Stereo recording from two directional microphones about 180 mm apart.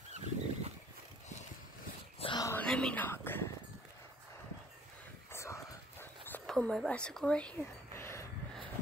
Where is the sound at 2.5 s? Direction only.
5° left (ahead or behind).